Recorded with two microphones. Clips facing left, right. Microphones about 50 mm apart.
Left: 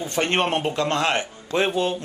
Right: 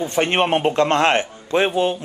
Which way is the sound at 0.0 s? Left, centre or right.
Right.